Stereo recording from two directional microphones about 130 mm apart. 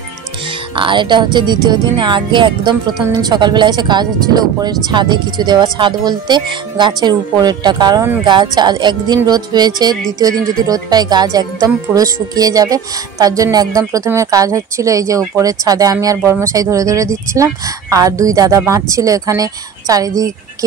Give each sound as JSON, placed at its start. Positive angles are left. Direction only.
{"t": 0.5, "sound": "speech", "side_deg": -40}